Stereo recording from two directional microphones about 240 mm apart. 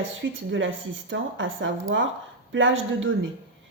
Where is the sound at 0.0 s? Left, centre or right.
Right.